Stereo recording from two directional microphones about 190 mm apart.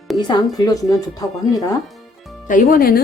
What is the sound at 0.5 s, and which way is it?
A woman's voice, 20° left (ahead or behind).